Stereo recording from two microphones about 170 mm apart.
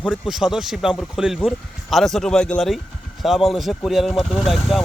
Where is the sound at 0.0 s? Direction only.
5° right (ahead or behind).